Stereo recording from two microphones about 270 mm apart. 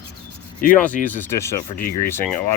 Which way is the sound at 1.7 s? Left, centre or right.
Left.